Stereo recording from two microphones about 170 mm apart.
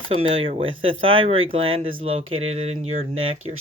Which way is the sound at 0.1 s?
35° right (ahead or behind).